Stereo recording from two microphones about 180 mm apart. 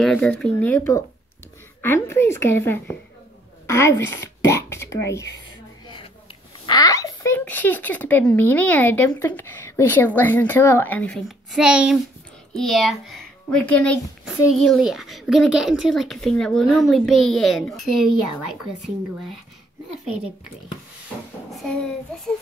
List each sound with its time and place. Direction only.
0.0 s speech: 5° left (ahead or behind)
6.6 s speech: 20° left (ahead or behind)
11.2 s a child's voice: 5° right (ahead or behind)